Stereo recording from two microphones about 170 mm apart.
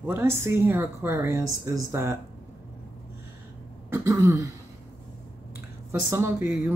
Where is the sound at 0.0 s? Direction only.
15° right (ahead or behind).